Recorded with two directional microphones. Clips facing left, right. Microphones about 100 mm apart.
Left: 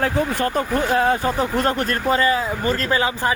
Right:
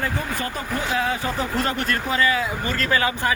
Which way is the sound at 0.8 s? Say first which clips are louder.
Left 5 dB; 50° left (ahead or behind).